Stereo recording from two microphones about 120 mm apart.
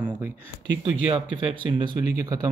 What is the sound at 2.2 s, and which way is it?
Speech, 30° right (ahead or behind).